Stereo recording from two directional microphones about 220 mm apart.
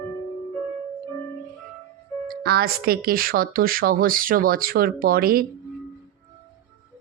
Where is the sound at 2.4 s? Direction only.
45° right (ahead or behind).